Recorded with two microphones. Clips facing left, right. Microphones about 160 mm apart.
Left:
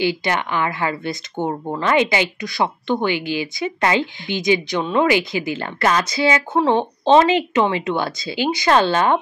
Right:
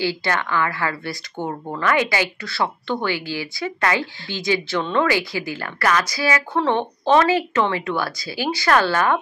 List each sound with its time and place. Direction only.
0.0 s speech: 20° left (ahead or behind)